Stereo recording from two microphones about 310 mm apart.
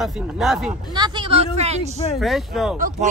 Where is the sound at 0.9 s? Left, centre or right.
Centre.